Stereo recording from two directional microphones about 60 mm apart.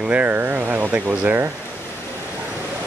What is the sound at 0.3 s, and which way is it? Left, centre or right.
Speech, right.